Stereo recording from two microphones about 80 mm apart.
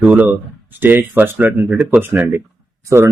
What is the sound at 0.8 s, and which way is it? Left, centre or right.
Speech, right.